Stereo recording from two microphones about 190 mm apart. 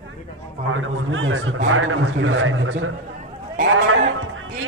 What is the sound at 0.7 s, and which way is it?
A man's voice, 90° right.